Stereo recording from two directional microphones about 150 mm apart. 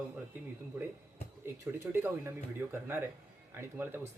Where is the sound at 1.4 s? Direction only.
15° right (ahead or behind).